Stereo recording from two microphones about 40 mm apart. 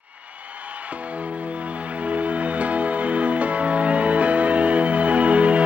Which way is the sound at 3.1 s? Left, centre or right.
Right.